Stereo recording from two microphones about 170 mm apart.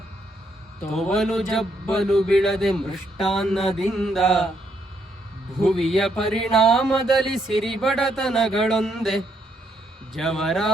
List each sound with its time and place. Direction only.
0.9 s speech: centre (ahead or behind)
5.6 s speech: centre (ahead or behind)